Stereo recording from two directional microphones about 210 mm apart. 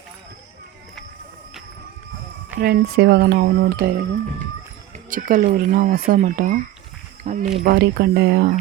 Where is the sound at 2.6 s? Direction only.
45° right (ahead or behind).